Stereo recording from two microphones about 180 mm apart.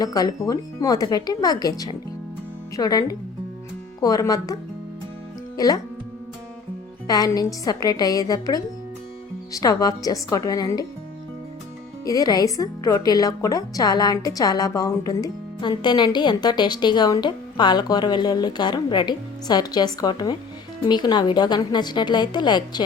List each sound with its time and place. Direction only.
0.0 s a woman's voice: 20° left (ahead or behind)
5.5 s a woman's voice: 20° left (ahead or behind)
7.1 s a woman's voice: 20° left (ahead or behind)
12.0 s a woman's voice: 20° left (ahead or behind)